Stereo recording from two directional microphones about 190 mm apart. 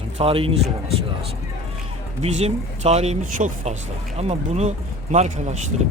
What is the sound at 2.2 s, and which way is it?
Speech, 35° right (ahead or behind).